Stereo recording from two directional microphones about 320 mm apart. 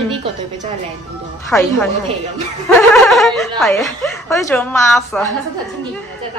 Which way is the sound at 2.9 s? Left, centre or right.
Centre.